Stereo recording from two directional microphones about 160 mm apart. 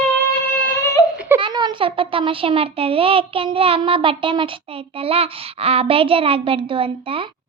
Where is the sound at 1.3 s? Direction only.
30° right (ahead or behind).